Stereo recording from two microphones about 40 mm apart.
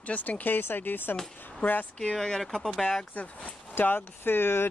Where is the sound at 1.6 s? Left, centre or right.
Left.